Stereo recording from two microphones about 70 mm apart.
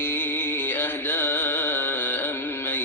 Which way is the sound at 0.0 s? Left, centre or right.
Left.